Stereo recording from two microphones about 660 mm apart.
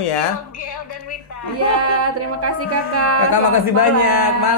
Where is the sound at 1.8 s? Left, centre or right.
Right.